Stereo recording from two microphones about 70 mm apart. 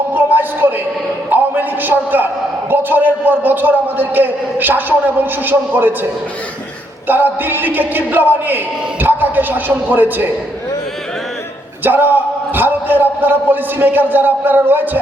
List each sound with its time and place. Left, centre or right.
0.1 s music: right
2.6 s speech: right
7.1 s speech: right
11.8 s a man's voice: right